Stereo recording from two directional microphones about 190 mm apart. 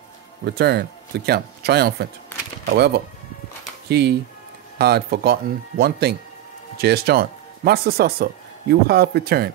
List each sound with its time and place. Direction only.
0.5 s speech: 60° right (ahead or behind)